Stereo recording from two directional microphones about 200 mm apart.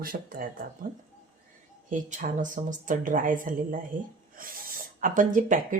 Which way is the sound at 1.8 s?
40° right (ahead or behind).